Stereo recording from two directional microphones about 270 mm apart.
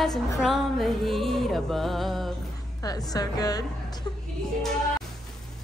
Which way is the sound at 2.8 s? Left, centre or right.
Centre.